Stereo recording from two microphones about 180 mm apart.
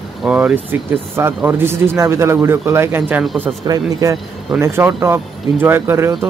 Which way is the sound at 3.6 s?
20° right (ahead or behind).